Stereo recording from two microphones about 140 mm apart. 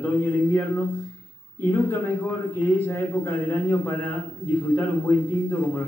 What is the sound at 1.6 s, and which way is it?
Speech, 15° left (ahead or behind).